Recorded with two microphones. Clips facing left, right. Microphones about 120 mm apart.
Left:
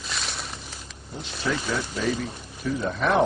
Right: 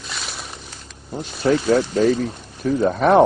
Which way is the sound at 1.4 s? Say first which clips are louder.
Right 11 dB; 45° right (ahead or behind).